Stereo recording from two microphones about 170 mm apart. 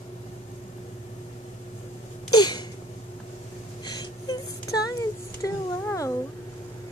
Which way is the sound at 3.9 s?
20° left (ahead or behind).